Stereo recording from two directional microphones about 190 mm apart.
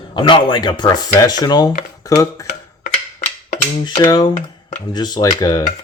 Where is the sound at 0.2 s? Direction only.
25° left (ahead or behind).